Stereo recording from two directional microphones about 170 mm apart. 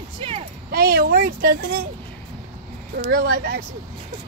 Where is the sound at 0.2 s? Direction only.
35° right (ahead or behind).